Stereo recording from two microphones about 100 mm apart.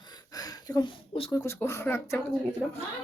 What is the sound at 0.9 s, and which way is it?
Speech, 70° left (ahead or behind).